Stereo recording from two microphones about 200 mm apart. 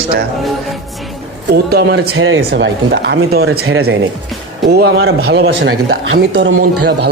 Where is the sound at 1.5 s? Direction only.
55° right (ahead or behind).